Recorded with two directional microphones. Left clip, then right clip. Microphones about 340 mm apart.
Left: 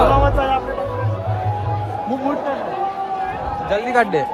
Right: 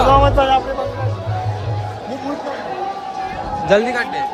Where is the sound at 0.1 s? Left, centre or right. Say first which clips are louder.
Right 4 dB; right.